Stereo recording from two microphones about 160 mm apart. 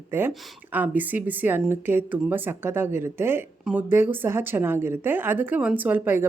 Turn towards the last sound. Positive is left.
turn(degrees=-10)  # may be behind; listen again after turning